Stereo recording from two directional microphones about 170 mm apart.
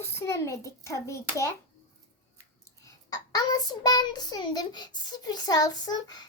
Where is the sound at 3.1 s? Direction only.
20° left (ahead or behind).